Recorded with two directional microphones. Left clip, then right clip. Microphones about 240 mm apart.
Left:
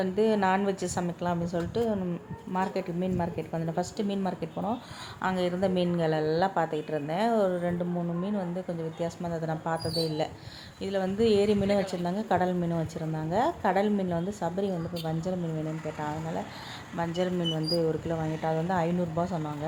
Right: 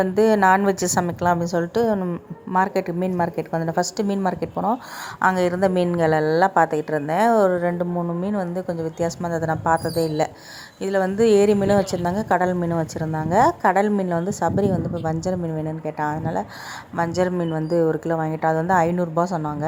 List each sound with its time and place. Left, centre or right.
0.2 s a woman's voice: right